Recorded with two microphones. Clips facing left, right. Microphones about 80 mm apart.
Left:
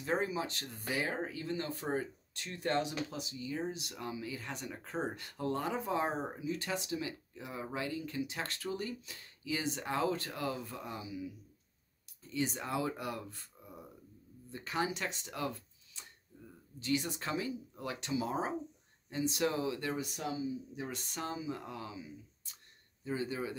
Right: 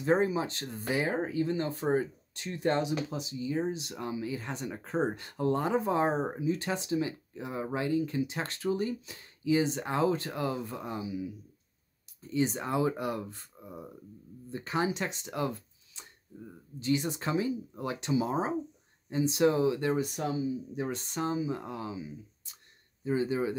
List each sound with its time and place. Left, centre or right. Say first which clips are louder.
0.0 s speech: right 7 dB; right
12.2 s speech: right 6 dB; right
20.0 s speech: right 6 dB; right
20.9 s speech: right 8 dB; right